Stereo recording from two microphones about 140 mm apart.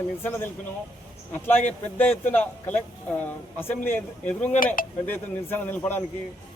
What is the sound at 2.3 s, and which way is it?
A man's voice, 10° left (ahead or behind).